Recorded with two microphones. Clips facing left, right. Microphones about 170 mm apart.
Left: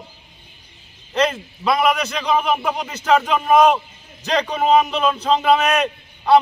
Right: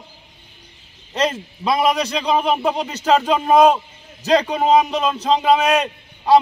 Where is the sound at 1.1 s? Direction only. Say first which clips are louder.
Left 1 dB; 35° right (ahead or behind).